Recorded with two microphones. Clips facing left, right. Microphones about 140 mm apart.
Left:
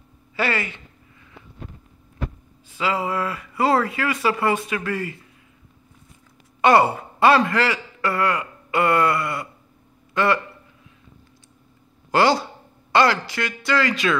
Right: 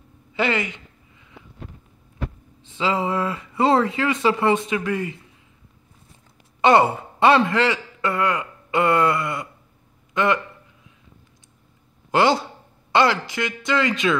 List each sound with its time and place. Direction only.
0.3 s a sound: 20° right (ahead or behind)
2.6 s speech: 25° right (ahead or behind)
6.6 s a man's voice: 25° right (ahead or behind)
12.1 s speech: 20° right (ahead or behind)